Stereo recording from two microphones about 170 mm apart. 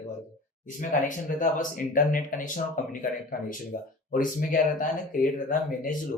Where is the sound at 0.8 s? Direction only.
50° left (ahead or behind).